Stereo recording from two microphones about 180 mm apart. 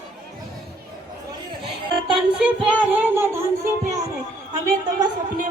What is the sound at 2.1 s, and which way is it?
Child singing, 5° right (ahead or behind).